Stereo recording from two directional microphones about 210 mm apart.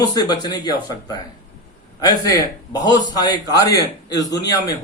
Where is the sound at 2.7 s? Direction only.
20° left (ahead or behind).